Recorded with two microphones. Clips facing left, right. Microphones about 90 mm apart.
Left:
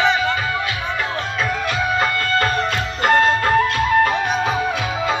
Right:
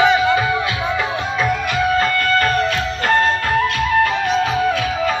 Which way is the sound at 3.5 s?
25° left (ahead or behind).